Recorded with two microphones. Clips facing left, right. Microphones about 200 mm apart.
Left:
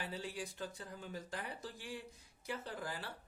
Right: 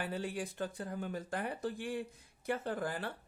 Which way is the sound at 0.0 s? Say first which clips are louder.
Right 6 dB; 55° right (ahead or behind).